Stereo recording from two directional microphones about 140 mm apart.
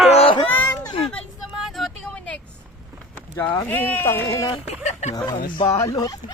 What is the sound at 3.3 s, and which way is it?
Speech, 15° left (ahead or behind).